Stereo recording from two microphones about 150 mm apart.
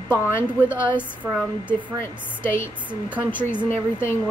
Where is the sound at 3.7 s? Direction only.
15° left (ahead or behind).